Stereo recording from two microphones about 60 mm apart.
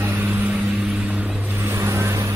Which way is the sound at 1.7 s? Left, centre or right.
Right.